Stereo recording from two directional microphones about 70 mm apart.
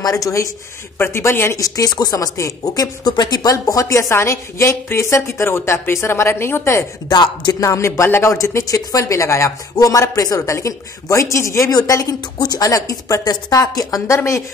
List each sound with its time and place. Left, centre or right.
0.0 s speech: left
0.9 s a woman's voice: left
1.6 s speech: left
3.5 s a woman's voice: left
7.1 s a man's voice: left
7.6 s speech: left
9.8 s speech: left
11.7 s speech: left
12.6 s speech: left